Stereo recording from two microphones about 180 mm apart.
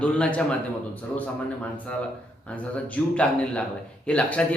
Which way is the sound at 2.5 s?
5° left (ahead or behind).